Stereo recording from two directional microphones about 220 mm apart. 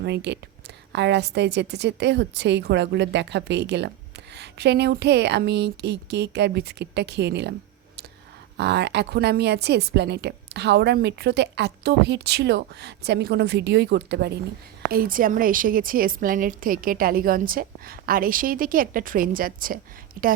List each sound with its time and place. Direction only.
0.0 s a woman's voice: 50° right (ahead or behind)
8.5 s a woman's voice: 50° right (ahead or behind)